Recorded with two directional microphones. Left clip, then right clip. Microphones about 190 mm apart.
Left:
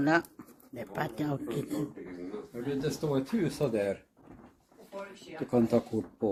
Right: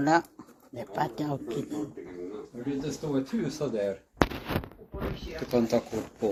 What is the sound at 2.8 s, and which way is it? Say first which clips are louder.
Speech: left 1 dB; 35° left (ahead or behind).